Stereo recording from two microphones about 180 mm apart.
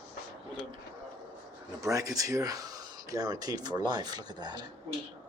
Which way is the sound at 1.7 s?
20° right (ahead or behind).